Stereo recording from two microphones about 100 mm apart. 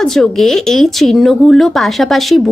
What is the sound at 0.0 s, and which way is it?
Speech, 5° left (ahead or behind).